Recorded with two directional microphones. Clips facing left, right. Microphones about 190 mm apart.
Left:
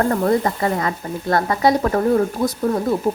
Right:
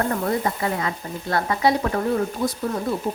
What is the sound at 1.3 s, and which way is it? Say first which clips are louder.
A woman's voice: left 3 dB; 45° left (ahead or behind).